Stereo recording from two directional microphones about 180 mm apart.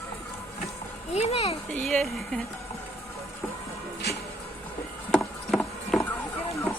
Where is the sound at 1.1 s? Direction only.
35° left (ahead or behind).